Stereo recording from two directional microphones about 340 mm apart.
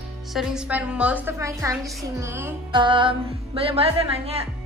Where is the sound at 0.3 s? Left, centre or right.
Centre.